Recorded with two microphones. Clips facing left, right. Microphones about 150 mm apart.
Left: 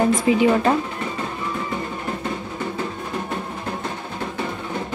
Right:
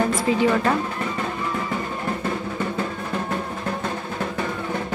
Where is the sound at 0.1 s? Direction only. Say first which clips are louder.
Left 3 dB; 15° left (ahead or behind).